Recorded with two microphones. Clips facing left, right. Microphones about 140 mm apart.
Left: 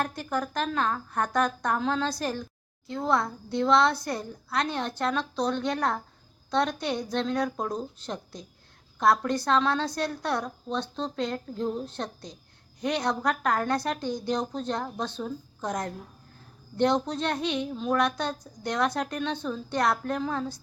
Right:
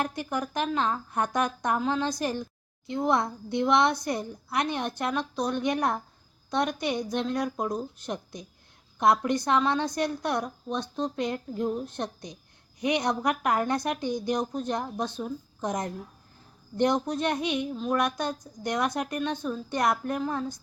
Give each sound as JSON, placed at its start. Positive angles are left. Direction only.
{"t": 0.0, "sound": "a woman's voice", "side_deg": -15}